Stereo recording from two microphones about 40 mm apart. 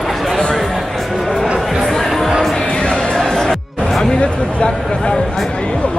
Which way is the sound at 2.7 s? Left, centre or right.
Left.